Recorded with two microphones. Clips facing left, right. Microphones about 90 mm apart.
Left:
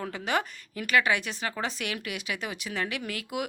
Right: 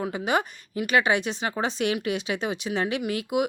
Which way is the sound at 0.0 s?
20° right (ahead or behind).